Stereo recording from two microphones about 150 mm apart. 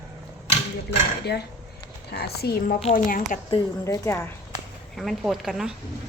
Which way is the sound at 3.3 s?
60° left (ahead or behind).